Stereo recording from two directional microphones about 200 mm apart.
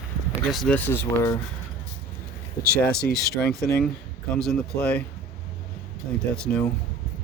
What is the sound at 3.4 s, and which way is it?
Speech, centre (ahead or behind).